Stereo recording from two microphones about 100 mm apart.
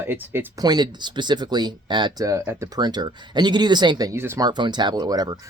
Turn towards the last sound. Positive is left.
turn(degrees=-40)  # may be behind; listen again after turning